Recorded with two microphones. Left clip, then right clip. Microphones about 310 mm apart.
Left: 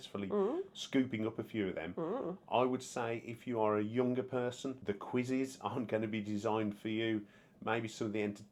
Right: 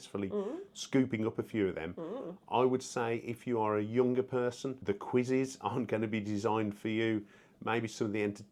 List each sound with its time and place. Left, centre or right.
0.3 s speech: left
0.8 s speech: right
2.0 s speech: left
2.5 s speech: right